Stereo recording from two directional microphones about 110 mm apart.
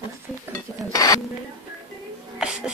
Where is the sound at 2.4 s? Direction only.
5° right (ahead or behind).